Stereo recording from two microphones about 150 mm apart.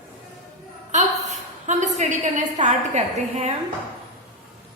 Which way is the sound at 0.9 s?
50° right (ahead or behind).